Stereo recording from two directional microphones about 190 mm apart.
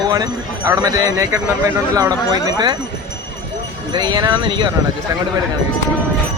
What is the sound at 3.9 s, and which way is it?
Speech, 20° right (ahead or behind).